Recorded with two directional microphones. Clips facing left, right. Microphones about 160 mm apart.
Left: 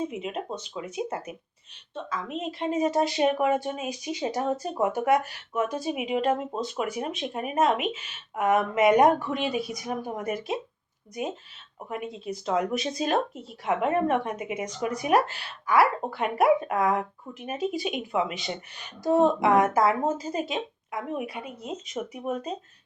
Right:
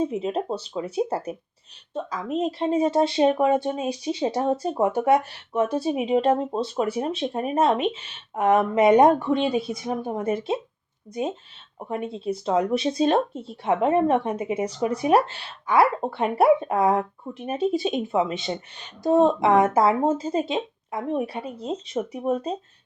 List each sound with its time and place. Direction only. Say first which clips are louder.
0.0 s speech: right 6 dB; 35° right (ahead or behind)
11.8 s speech: right 5 dB; 30° right (ahead or behind)